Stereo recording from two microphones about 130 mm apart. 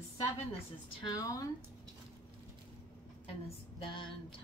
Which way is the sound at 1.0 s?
25° left (ahead or behind).